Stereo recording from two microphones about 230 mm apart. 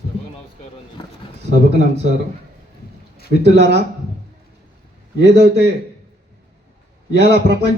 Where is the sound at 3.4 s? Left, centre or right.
Right.